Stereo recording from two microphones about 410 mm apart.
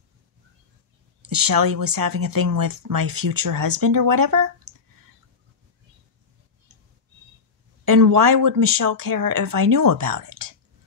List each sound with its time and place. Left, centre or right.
1.3 s speech: right
7.8 s speech: right